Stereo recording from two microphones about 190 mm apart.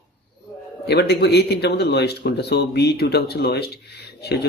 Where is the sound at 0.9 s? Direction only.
60° left (ahead or behind).